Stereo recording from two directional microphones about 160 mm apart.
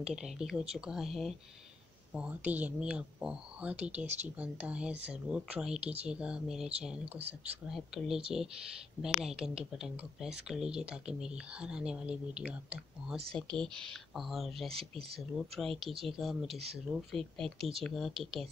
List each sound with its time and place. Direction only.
0.0 s speech: 5° right (ahead or behind)
13.3 s speech: 5° left (ahead or behind)
14.7 s speech: 35° right (ahead or behind)
15.3 s speech: centre (ahead or behind)
17.6 s speech: 35° right (ahead or behind)
17.8 s speech: centre (ahead or behind)